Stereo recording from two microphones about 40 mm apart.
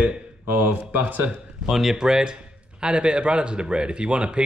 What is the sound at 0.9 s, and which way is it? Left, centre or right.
Speech, right.